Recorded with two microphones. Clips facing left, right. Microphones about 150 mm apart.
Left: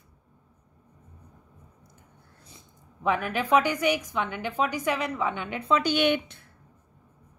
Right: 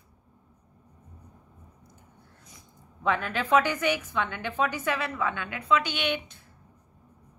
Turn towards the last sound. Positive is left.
turn(degrees=45)  # may be behind; listen again after turning